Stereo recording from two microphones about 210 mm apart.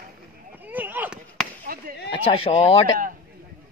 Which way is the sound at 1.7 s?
45° right (ahead or behind).